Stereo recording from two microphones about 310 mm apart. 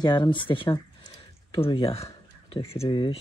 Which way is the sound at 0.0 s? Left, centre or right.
Centre.